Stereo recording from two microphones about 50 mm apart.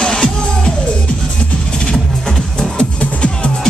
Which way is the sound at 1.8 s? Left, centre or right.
Centre.